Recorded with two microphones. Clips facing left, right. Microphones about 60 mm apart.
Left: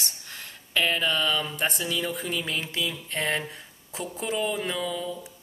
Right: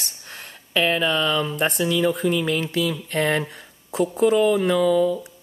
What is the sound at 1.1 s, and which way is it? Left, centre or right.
Speech, right.